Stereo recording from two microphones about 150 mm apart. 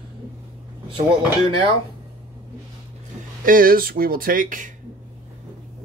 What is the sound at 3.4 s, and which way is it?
Speech, 70° right (ahead or behind).